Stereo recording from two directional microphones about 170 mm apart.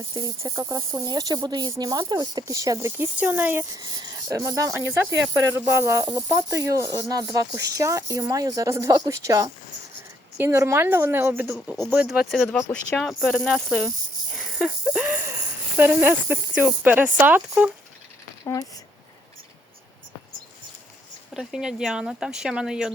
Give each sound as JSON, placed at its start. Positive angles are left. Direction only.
{"t": 0.1, "sound": "speech", "side_deg": -20}
{"t": 3.8, "sound": "speech", "side_deg": -25}
{"t": 11.5, "sound": "speech", "side_deg": 0}
{"t": 12.5, "sound": "speech", "side_deg": 15}
{"t": 12.9, "sound": "speech", "side_deg": 0}
{"t": 14.3, "sound": "wheeze", "side_deg": -5}
{"t": 15.8, "sound": "speech", "side_deg": -10}
{"t": 21.3, "sound": "speech", "side_deg": -5}